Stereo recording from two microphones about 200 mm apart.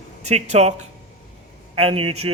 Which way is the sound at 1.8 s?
30° right (ahead or behind).